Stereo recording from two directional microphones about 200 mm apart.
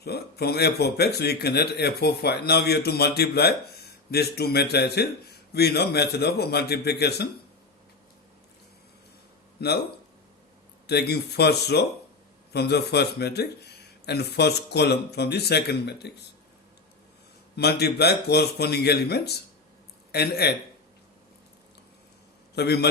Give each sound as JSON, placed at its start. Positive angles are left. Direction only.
{"t": 0.0, "sound": "a man's voice", "side_deg": 55}
{"t": 9.6, "sound": "a man's voice", "side_deg": 55}
{"t": 10.8, "sound": "speech", "side_deg": 55}
{"t": 17.6, "sound": "a man's voice", "side_deg": 55}
{"t": 22.5, "sound": "speech", "side_deg": 55}